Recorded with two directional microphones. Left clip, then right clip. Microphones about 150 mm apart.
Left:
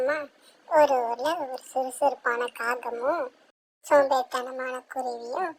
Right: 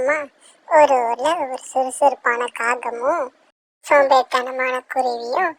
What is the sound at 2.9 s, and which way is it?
Speech, 40° right (ahead or behind).